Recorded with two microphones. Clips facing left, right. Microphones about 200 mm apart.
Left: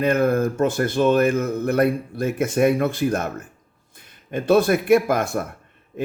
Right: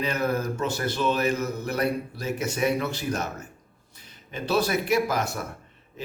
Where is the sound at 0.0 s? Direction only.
50° left (ahead or behind).